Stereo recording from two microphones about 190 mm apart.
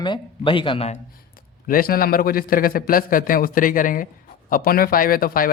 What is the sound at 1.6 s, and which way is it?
Speech, 50° left (ahead or behind).